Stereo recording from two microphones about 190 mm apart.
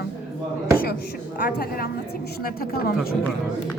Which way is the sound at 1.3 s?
45° left (ahead or behind).